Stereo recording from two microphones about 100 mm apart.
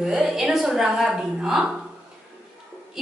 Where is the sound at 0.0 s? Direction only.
5° right (ahead or behind).